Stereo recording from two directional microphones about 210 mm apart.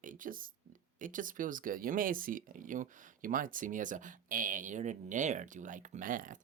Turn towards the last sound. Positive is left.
turn(degrees=-40)  # may be behind; listen again after turning